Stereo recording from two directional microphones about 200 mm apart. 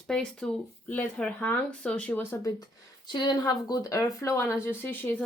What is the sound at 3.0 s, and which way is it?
Speech, 25° left (ahead or behind).